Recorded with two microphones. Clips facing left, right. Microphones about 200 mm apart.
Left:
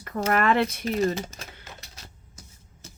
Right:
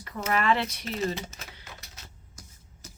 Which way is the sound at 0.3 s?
50° left (ahead or behind).